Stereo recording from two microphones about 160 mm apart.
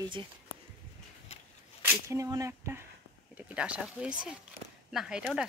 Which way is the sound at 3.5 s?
5° right (ahead or behind).